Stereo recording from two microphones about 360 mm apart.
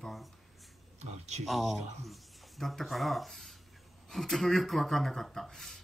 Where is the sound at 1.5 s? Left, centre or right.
Centre.